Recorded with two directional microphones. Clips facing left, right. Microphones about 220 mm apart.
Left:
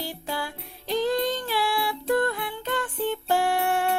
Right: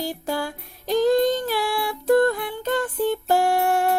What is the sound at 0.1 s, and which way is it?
Music, 45° right (ahead or behind).